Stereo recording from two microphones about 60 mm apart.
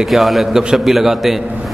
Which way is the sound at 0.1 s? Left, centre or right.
Centre.